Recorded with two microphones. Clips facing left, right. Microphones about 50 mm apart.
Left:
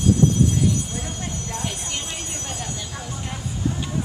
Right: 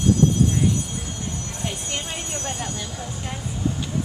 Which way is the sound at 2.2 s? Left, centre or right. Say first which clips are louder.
Right 3 dB; right.